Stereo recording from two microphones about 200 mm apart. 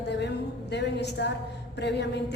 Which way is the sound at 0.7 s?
60° left (ahead or behind).